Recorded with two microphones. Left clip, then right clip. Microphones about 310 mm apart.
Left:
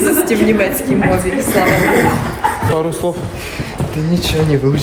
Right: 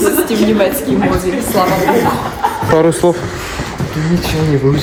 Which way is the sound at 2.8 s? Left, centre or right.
Right.